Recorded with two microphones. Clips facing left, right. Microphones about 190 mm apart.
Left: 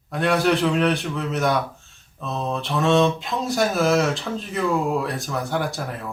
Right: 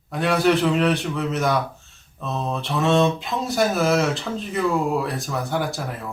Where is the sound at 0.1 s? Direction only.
Centre (ahead or behind).